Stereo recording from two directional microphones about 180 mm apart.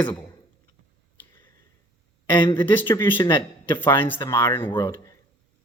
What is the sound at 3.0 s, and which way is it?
Speech, 15° left (ahead or behind).